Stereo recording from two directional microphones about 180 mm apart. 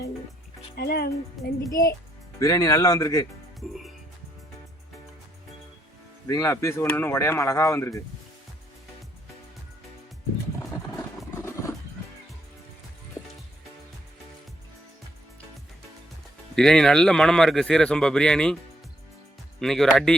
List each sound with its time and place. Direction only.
0.8 s speech: 60° left (ahead or behind)
1.4 s speech: centre (ahead or behind)
2.4 s speech: 20° left (ahead or behind)
6.2 s speech: 15° left (ahead or behind)
11.3 s a sound: 15° left (ahead or behind)
16.6 s speech: 5° left (ahead or behind)
19.5 s speech: centre (ahead or behind)